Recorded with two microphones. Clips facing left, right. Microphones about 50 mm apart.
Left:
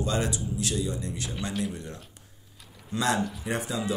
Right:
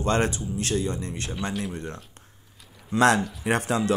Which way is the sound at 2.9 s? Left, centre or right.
Right.